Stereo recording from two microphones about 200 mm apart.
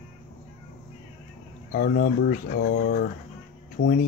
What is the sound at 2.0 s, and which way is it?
Speech, 50° left (ahead or behind).